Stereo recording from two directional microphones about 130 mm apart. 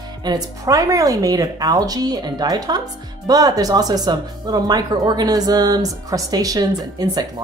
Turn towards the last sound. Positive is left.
turn(degrees=-30)  # may be behind; listen again after turning